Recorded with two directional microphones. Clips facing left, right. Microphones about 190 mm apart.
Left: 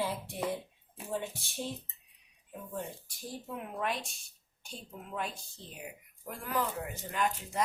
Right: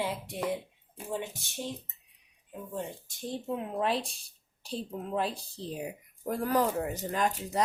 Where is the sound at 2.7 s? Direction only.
25° right (ahead or behind).